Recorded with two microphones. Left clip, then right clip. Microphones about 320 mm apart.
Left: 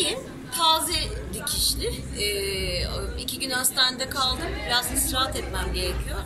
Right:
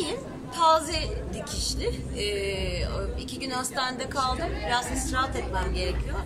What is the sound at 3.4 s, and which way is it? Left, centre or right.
Speech, centre.